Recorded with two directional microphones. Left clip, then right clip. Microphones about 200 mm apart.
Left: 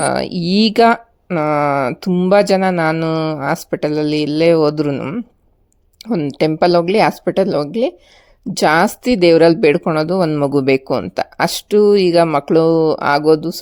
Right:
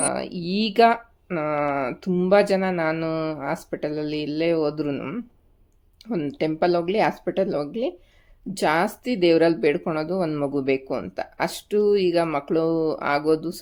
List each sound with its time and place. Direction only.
0.0 s speech: 40° left (ahead or behind)